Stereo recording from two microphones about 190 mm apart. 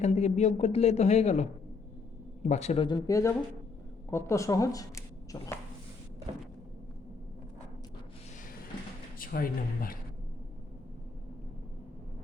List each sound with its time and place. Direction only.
0.0 s speech: 35° left (ahead or behind)
2.8 s speech: 20° left (ahead or behind)
9.1 s speech: 50° left (ahead or behind)